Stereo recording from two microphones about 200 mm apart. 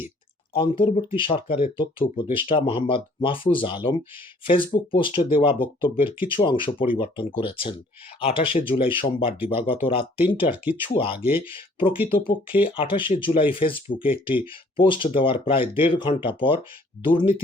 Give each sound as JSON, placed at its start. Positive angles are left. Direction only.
{"t": 0.5, "sound": "speech", "side_deg": 25}